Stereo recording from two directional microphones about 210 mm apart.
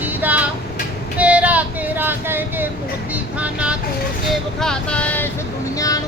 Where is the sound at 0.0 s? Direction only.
10° right (ahead or behind).